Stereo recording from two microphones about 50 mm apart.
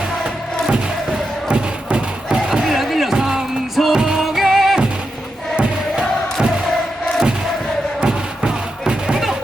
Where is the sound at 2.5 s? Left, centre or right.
Centre.